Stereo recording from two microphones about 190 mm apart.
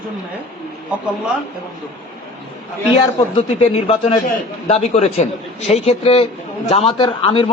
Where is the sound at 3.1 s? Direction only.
30° left (ahead or behind).